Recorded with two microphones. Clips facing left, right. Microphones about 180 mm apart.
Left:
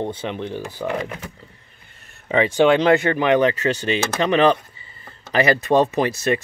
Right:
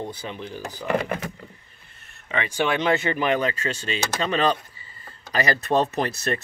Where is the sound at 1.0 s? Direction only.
60° right (ahead or behind).